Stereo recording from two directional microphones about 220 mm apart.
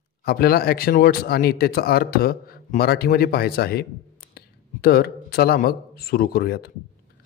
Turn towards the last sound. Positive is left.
turn(degrees=45)  # may be behind; listen again after turning